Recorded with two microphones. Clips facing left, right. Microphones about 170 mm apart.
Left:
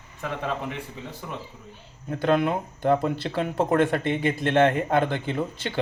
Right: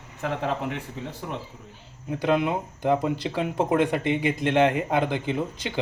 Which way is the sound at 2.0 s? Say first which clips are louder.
Left 1 dB; 10° right (ahead or behind).